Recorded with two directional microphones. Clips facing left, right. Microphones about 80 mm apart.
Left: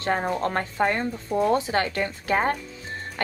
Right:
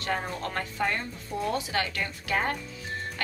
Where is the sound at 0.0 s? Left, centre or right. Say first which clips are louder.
Left 7 dB; left.